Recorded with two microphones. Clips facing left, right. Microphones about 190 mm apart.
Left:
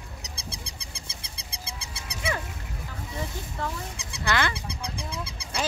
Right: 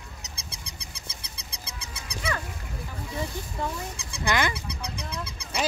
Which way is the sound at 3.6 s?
15° right (ahead or behind).